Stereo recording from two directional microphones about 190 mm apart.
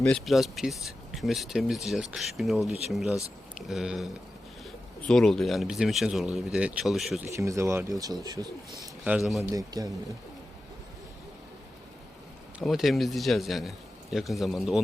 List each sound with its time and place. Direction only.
0.0 s speech: centre (ahead or behind)
7.3 s speech: 15° right (ahead or behind)
9.0 s speech: 5° right (ahead or behind)
9.5 s speech: 20° right (ahead or behind)
12.5 s speech: centre (ahead or behind)